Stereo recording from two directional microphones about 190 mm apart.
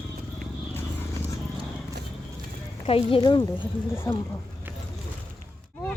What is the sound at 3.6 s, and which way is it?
Speech, 10° left (ahead or behind).